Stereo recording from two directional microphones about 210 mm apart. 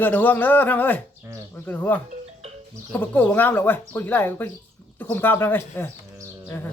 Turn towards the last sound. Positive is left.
turn(degrees=10)  # may be behind; listen again after turning